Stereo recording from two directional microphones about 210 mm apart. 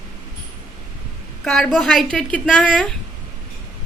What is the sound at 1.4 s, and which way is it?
A woman's voice, centre (ahead or behind).